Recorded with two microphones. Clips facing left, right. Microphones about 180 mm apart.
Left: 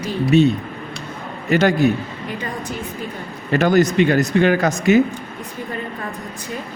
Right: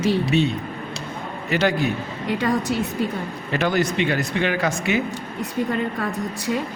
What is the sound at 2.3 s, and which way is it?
Speech, 80° right.